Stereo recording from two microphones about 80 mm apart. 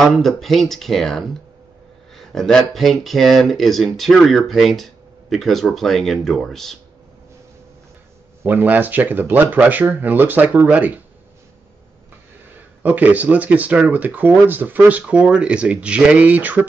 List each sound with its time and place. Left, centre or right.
0.0 s speech: centre
8.5 s speech: right
12.8 s speech: right